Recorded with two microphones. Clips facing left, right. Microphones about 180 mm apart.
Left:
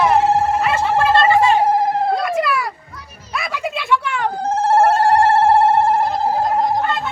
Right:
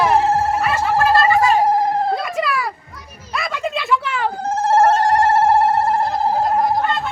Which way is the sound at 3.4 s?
5° left (ahead or behind).